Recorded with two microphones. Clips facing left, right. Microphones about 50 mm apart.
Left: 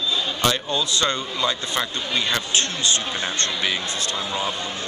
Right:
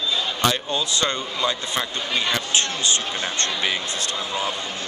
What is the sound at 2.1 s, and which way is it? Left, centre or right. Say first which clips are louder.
Speech: even; centre.